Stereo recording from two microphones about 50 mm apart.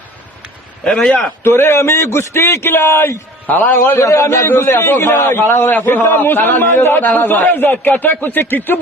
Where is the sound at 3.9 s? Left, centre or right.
Left.